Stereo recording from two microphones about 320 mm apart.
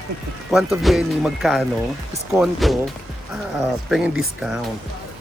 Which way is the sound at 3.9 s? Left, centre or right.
Centre.